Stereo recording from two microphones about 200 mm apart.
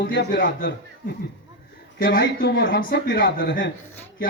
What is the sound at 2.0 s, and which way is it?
Speech, 50° left (ahead or behind).